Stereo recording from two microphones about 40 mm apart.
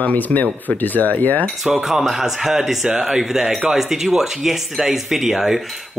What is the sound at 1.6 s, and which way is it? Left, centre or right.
Cutlery, centre.